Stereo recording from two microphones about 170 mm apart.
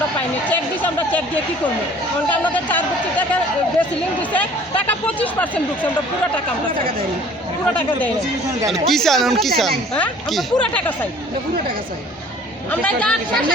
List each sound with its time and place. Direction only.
0.2 s speech: 10° left (ahead or behind)
2.3 s speech: 10° left (ahead or behind)
8.7 s a woman's voice: centre (ahead or behind)
12.7 s speech: 5° left (ahead or behind)